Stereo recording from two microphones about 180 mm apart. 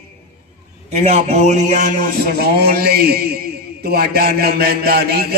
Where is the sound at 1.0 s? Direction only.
40° right (ahead or behind).